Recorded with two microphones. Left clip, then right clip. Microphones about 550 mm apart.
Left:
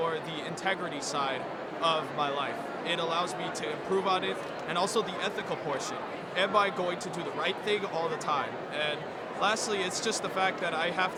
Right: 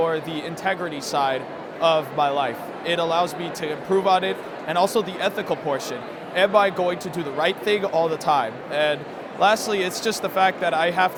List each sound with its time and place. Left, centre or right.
0.6 s a man's voice: centre